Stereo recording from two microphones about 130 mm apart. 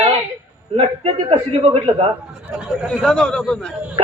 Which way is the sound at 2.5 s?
5° right (ahead or behind).